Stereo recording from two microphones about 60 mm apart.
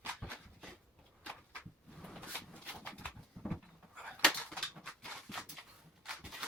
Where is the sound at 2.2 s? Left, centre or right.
Left.